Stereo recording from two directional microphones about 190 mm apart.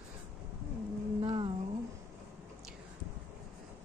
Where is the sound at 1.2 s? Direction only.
25° right (ahead or behind).